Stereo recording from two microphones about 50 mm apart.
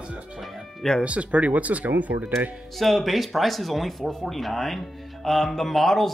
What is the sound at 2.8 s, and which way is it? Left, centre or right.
Speech, centre.